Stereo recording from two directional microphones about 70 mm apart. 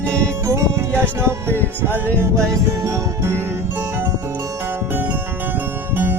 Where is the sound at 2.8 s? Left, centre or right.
Right.